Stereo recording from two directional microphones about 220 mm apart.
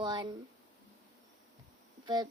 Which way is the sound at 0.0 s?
20° right (ahead or behind).